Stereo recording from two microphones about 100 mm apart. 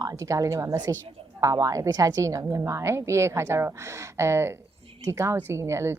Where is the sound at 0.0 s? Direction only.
35° right (ahead or behind).